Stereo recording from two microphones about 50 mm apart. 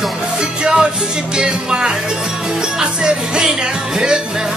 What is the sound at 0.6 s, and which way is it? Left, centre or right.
Music, centre.